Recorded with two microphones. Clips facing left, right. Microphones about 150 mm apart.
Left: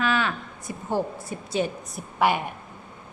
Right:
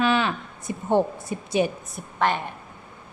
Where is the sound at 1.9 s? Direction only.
10° left (ahead or behind).